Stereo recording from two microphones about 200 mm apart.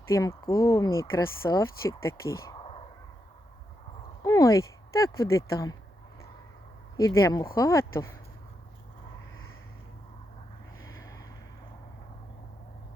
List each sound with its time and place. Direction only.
0.1 s speech: 15° left (ahead or behind)
2.5 s a sound: 30° left (ahead or behind)
4.2 s speech: 15° left (ahead or behind)
6.9 s speech: 15° left (ahead or behind)